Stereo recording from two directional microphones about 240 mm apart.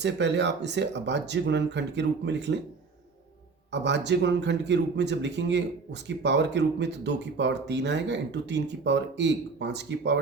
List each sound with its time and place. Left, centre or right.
0.0 s speech: right
3.7 s speech: right